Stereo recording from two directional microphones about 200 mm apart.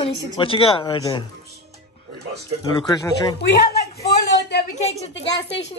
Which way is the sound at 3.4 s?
55° left (ahead or behind).